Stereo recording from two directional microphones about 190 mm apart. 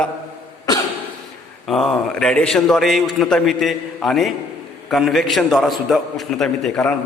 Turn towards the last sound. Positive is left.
turn(degrees=5)  # may be behind; listen again after turning